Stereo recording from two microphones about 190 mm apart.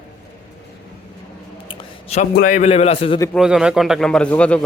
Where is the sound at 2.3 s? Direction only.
45° left (ahead or behind); by 3.2 s 30° left (ahead or behind).